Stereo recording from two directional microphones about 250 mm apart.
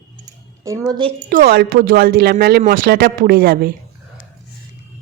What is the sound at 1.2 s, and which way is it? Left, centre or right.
Speech, right.